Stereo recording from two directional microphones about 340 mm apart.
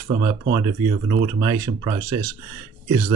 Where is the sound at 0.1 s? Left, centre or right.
Centre.